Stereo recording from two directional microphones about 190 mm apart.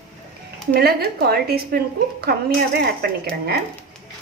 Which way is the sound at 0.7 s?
55° right (ahead or behind).